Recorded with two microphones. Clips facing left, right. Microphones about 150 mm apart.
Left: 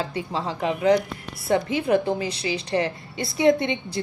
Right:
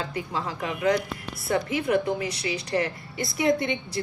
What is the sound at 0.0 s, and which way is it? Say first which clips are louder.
A woman's voice: left 3 dB; 30° left (ahead or behind).